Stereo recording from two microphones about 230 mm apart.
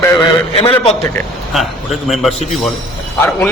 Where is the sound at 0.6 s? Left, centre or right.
Left.